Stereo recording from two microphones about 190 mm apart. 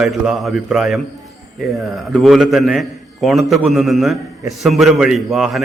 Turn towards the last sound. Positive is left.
turn(degrees=0)  # may be behind; listen again after turning